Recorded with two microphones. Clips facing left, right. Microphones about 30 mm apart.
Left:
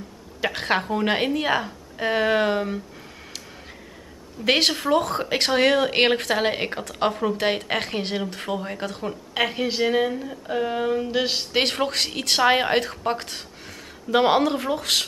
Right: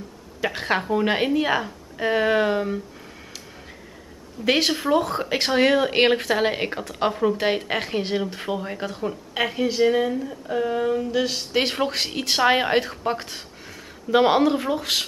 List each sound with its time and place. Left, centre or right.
0.4 s a woman's voice: centre
4.5 s a woman's voice: centre
9.3 s a woman's voice: centre
11.6 s a woman's voice: centre